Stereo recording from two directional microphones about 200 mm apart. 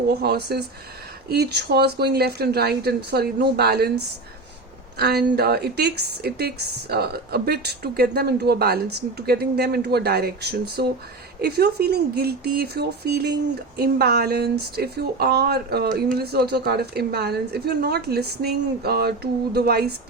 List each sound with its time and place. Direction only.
0.1 s a woman's voice: 55° right (ahead or behind)
4.9 s a woman's voice: 50° right (ahead or behind)